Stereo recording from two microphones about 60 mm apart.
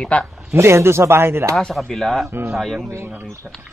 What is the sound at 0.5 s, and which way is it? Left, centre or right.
Speech, right.